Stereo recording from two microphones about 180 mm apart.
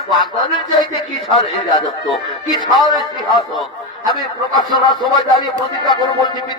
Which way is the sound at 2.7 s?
Centre (ahead or behind).